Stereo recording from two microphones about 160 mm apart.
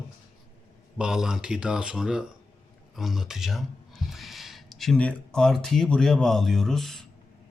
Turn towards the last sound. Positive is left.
turn(degrees=0)  # may be behind; listen again after turning